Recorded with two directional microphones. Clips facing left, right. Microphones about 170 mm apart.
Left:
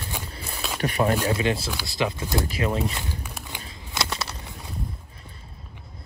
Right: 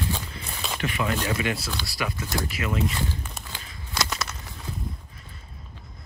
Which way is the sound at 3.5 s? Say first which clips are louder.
Left 2 dB; 25° left (ahead or behind).